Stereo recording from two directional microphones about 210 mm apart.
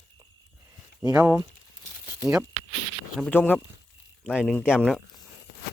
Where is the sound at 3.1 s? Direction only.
5° left (ahead or behind).